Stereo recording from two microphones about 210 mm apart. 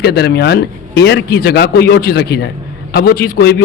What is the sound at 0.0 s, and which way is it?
A man's voice, 50° left (ahead or behind).